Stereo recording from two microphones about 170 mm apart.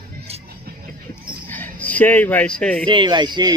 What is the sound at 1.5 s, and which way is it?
Speech, 10° left (ahead or behind).